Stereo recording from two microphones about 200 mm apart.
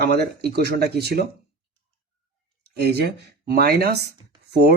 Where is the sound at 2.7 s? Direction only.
55° right (ahead or behind).